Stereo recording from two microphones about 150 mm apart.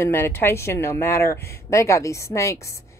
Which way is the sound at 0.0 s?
15° left (ahead or behind).